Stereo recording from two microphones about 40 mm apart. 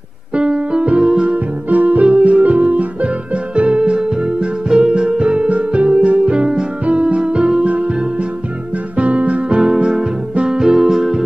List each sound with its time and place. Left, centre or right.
0.3 s keyboard: right
2.2 s music: right
9.8 s music: centre
10.6 s music: centre